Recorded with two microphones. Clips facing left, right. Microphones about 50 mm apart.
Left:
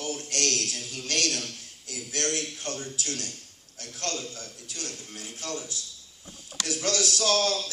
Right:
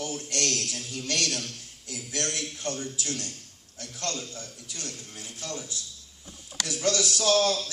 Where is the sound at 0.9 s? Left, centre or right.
Left.